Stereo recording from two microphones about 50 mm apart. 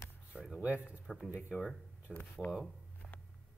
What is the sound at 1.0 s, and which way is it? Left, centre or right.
Speech, centre.